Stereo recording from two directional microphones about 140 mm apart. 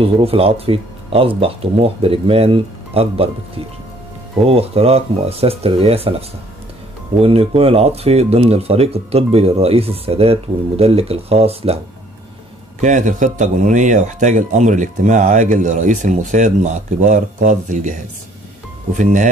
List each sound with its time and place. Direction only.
0.0 s speech: 45° right (ahead or behind)
12.8 s a man's voice: 60° right (ahead or behind)